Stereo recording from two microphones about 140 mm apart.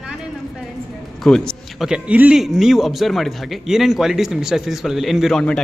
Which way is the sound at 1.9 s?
10° right (ahead or behind).